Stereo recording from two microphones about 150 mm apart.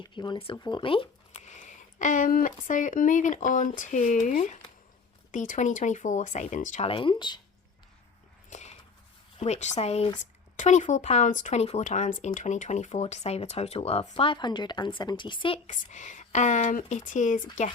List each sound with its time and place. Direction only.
0.1 s speech: 30° left (ahead or behind)
1.5 s speech: 55° left (ahead or behind)
6.8 s speech: 35° left (ahead or behind)
8.4 s a sound: 50° left (ahead or behind)
9.4 s speech: 50° left (ahead or behind)
15.7 s speech: 55° left (ahead or behind)